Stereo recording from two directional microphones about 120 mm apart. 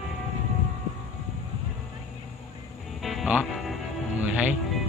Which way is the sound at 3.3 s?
10° right (ahead or behind).